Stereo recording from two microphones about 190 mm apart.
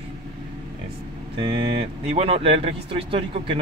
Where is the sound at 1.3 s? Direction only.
25° right (ahead or behind).